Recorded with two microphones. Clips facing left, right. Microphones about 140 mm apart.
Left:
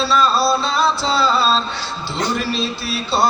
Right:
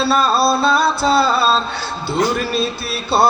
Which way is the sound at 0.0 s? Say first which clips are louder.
Right 1 dB; 55° right (ahead or behind).